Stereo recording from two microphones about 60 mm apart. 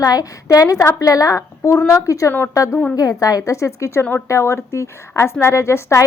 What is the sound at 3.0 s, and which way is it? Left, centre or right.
A woman's voice, left.